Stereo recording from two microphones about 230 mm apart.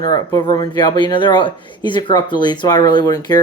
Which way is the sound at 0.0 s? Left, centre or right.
Centre.